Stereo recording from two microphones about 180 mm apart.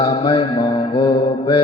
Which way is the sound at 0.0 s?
30° left (ahead or behind).